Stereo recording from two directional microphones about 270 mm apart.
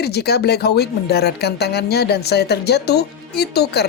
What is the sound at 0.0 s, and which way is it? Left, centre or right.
Speech, left.